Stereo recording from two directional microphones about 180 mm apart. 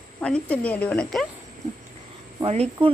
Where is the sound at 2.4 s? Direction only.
35° right (ahead or behind).